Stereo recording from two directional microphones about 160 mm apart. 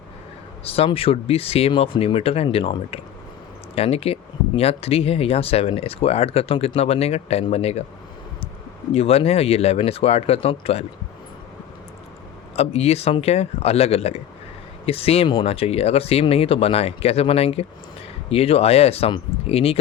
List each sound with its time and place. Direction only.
0.6 s speech: 35° left (ahead or behind)
8.9 s speech: 40° left (ahead or behind)
12.5 s speech: 40° left (ahead or behind)